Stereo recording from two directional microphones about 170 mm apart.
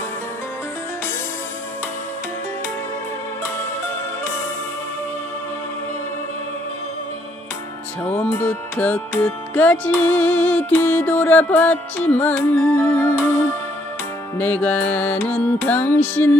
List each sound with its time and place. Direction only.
8.0 s music: 10° left (ahead or behind)
14.4 s music: 10° left (ahead or behind)